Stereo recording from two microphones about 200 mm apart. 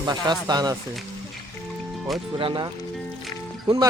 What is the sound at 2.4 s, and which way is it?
Speech, 25° right (ahead or behind).